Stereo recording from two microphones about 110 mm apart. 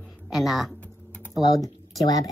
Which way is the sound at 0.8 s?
10° left (ahead or behind).